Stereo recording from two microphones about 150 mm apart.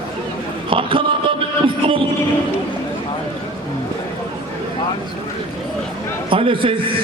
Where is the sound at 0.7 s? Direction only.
35° right (ahead or behind).